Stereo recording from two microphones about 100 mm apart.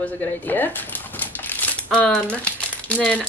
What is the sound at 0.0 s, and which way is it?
Speech, 15° left (ahead or behind).